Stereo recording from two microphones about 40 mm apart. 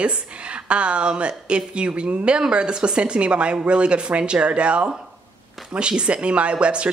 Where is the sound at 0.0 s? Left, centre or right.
Right.